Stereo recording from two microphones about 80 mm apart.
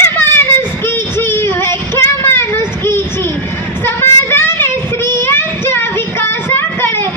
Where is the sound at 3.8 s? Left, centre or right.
Left.